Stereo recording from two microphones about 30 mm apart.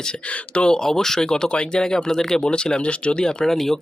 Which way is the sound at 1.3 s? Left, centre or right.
Left.